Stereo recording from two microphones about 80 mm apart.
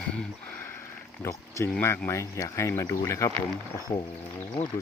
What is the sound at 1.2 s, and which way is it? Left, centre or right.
Speech, left.